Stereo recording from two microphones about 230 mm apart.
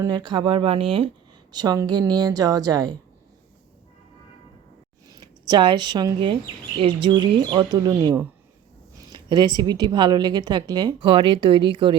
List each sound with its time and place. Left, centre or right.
0.0 s a woman's voice: centre
5.0 s speech: centre
9.0 s a sound: centre
9.6 s speech: centre